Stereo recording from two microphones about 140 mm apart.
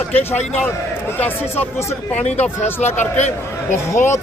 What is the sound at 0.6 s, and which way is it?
Speech, 15° left (ahead or behind).